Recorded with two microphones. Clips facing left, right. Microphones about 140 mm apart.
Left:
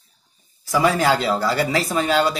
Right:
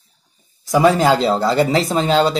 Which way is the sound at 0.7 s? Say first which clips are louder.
Right 5 dB; 20° right (ahead or behind).